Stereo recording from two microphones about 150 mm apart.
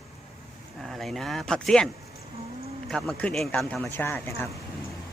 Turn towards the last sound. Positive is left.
turn(degrees=15)  # may be behind; listen again after turning